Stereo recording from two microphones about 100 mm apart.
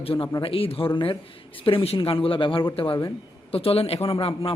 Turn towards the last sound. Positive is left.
turn(degrees=70)  # may be behind; listen again after turning